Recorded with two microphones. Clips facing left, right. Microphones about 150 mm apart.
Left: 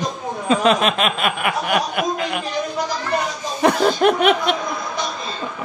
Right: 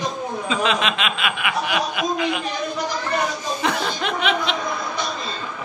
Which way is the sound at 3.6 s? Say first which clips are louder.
Left 10 dB; 50° left (ahead or behind).